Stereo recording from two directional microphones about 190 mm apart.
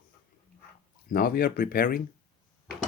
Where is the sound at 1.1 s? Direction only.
50° left (ahead or behind).